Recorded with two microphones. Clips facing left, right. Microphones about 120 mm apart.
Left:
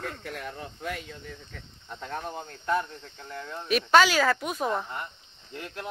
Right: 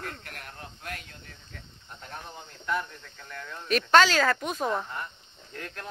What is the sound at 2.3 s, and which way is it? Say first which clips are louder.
Speech: left 7 dB; 50° left (ahead or behind).